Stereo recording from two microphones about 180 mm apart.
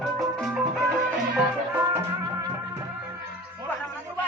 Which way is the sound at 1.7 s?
15° right (ahead or behind).